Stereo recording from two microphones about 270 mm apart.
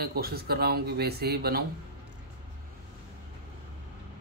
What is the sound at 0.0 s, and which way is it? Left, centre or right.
Speech, right.